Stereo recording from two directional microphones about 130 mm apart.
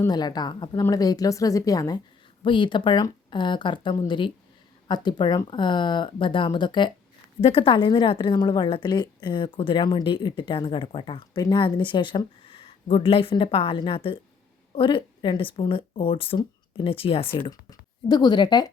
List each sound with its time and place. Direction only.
0.1 s a woman's voice: 30° left (ahead or behind)
2.4 s a woman's voice: 40° left (ahead or behind)
17.5 s speech: 30° left (ahead or behind)